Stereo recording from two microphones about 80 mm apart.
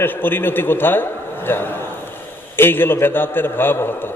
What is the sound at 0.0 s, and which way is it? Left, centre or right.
A man's voice, left.